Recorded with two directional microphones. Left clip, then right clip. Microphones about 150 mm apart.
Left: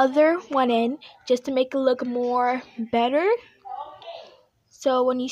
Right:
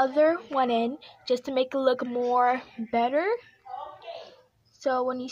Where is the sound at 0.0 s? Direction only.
50° left (ahead or behind); by 2.7 s 25° left (ahead or behind).